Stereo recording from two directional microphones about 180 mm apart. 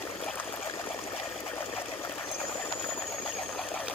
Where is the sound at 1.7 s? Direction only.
30° left (ahead or behind).